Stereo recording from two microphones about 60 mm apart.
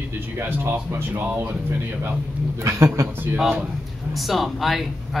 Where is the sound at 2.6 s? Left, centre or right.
Right.